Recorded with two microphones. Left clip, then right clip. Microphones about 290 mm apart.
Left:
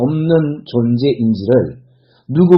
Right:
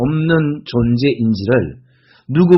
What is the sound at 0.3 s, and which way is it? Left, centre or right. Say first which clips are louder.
Speech: left 2 dB; right.